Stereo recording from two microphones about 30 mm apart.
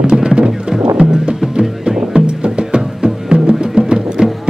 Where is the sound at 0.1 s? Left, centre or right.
Right.